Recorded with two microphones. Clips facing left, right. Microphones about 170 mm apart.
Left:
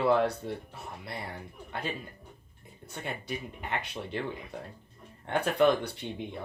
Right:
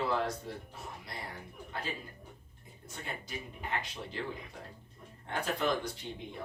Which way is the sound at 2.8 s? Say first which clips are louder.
Left 6 dB; 65° left (ahead or behind).